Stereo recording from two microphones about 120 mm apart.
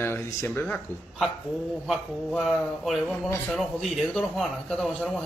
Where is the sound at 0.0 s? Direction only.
20° left (ahead or behind).